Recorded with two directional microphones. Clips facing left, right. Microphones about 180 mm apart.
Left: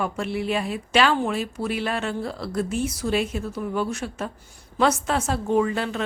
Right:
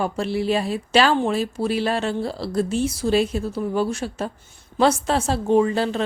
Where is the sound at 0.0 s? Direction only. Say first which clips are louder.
Right 3 dB; 35° right (ahead or behind).